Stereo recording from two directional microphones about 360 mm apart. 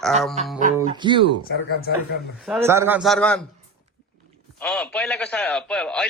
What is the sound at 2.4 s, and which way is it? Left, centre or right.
Speech, centre.